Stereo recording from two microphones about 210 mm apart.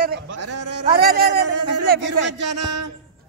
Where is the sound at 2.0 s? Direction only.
55° right (ahead or behind).